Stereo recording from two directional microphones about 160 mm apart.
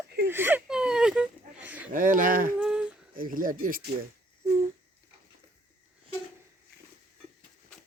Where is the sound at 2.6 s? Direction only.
5° right (ahead or behind).